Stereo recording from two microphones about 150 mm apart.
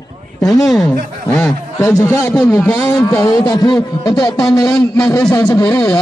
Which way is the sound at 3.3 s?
25° left (ahead or behind).